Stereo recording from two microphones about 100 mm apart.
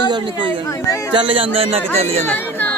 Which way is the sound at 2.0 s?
90° right.